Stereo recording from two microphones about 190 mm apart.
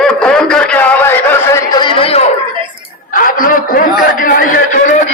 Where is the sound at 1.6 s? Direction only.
25° left (ahead or behind).